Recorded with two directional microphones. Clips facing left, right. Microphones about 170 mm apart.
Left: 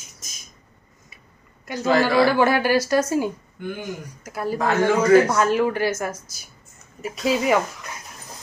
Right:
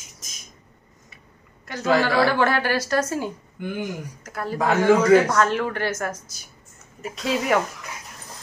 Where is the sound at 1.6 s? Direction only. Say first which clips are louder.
Left 1 dB; 10° left (ahead or behind).